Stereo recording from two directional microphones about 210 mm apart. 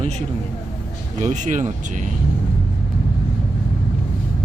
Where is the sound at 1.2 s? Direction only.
35° right (ahead or behind).